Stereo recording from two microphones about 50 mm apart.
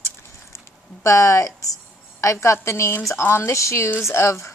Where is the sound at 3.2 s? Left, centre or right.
Left.